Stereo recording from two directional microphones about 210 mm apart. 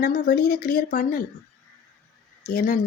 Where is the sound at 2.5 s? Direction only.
40° left (ahead or behind).